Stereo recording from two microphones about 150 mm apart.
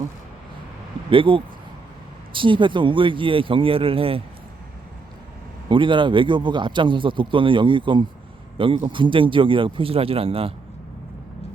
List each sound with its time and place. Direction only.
1.1 s a man's voice: 35° right (ahead or behind)
5.6 s a man's voice: 35° right (ahead or behind)